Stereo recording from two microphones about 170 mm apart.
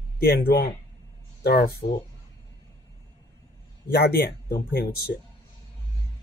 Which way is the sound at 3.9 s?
75° left (ahead or behind).